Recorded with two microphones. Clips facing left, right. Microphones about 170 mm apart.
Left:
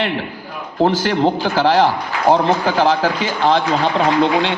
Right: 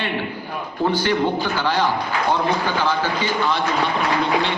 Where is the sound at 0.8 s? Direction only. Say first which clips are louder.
Left 4 dB; 90° left.